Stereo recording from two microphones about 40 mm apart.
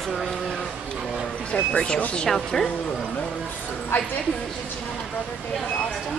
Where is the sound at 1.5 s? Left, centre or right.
Left.